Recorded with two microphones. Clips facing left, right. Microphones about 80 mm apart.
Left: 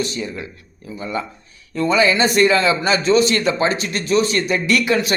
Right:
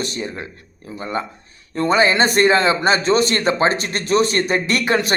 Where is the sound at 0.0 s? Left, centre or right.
Right.